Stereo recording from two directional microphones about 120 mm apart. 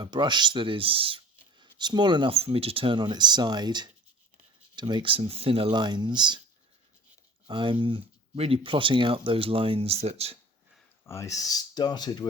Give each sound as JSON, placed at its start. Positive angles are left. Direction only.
{"t": 0.0, "sound": "speech", "side_deg": -40}
{"t": 2.3, "sound": "speech", "side_deg": -55}
{"t": 7.4, "sound": "speech", "side_deg": -45}
{"t": 11.0, "sound": "speech", "side_deg": 25}